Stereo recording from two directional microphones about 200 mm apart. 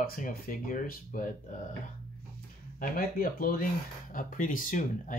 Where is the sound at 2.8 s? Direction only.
45° left (ahead or behind).